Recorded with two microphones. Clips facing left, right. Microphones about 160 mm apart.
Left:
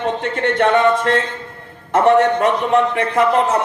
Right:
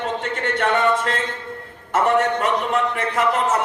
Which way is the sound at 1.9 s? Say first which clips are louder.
Left 6 dB; 35° left (ahead or behind).